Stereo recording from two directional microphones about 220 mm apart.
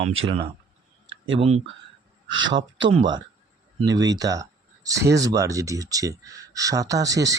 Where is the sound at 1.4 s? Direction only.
30° right (ahead or behind).